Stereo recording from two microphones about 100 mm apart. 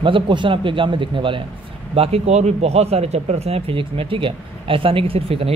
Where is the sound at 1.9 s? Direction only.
90° right.